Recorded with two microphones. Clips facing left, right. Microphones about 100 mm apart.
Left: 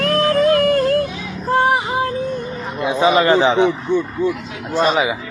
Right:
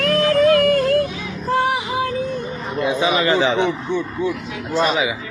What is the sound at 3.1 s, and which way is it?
Speech, 35° left (ahead or behind).